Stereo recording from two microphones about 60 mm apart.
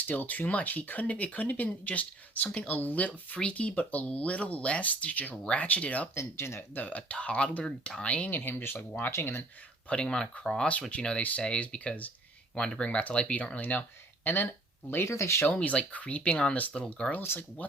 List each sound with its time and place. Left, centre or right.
0.0 s speech: left
6.1 s speech: left
6.7 s speech: left
9.9 s speech: centre
13.6 s speech: left
15.0 s speech: left
15.4 s speech: left